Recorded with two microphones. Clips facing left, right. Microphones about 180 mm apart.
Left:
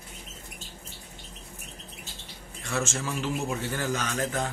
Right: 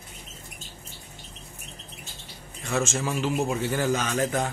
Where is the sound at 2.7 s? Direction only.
15° right (ahead or behind).